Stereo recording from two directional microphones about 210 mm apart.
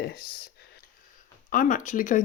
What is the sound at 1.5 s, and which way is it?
Speech, 40° left (ahead or behind).